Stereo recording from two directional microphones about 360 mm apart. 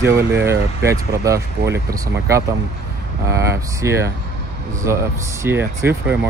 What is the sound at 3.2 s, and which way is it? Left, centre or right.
Speech, centre.